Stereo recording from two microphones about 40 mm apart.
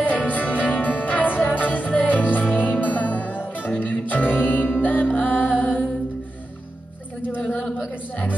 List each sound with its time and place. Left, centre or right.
0.1 s music: left
7.4 s a sound: left
7.7 s music: left